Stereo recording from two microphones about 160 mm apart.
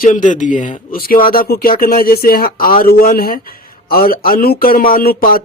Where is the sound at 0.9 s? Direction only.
65° left (ahead or behind).